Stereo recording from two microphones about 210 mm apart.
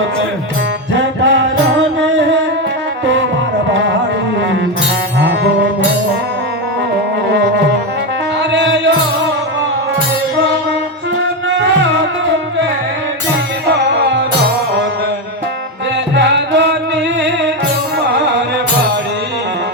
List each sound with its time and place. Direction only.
0.9 s music: 60° right (ahead or behind)
8.5 s music: 55° right (ahead or behind)
11.4 s music: 60° right (ahead or behind)
13.7 s music: 55° right (ahead or behind)
16.1 s music: 55° right (ahead or behind)